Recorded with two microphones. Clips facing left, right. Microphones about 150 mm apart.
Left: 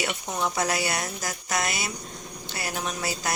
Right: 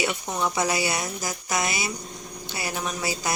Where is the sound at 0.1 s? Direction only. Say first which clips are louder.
Right 2 dB; centre (ahead or behind).